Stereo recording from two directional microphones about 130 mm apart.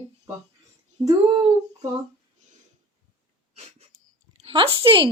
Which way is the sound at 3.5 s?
55° right (ahead or behind).